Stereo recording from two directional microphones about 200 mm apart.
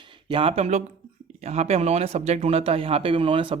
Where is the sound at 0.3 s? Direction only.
25° right (ahead or behind).